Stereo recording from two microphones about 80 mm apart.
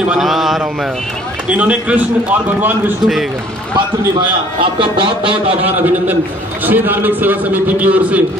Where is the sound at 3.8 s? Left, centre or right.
Right.